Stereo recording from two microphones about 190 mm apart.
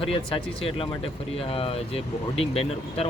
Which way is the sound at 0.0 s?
30° left (ahead or behind).